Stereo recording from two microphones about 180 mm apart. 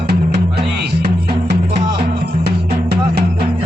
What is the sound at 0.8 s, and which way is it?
Music, 65° right (ahead or behind).